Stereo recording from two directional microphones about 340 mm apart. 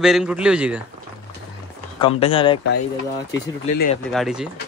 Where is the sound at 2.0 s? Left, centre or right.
Centre.